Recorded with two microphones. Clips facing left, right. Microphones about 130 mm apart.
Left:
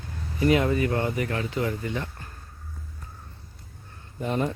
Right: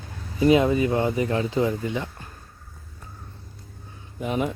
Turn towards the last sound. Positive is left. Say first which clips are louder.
# right 1 dB
turn(degrees=-5)  # may be behind; listen again after turning